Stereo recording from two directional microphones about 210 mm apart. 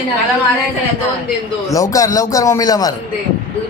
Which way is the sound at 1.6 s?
15° left (ahead or behind).